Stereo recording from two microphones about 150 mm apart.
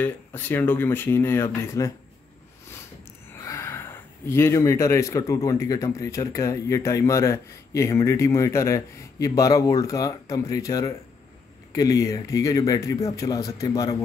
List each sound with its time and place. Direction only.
0.0 s speech: 15° left (ahead or behind)
3.4 s speech: 20° left (ahead or behind)